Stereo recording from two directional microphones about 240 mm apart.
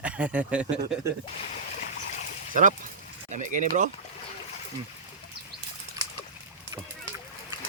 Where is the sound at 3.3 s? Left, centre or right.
Right.